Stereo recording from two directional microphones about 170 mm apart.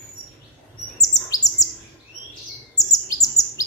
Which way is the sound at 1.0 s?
20° left (ahead or behind).